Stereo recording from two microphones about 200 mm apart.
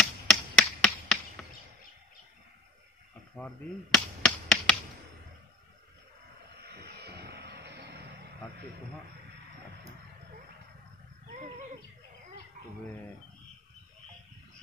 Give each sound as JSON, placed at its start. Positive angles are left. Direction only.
{"t": 0.0, "sound": "tap", "side_deg": 5}
{"t": 3.3, "sound": "a sound", "side_deg": 5}
{"t": 6.6, "sound": "vehicle", "side_deg": -55}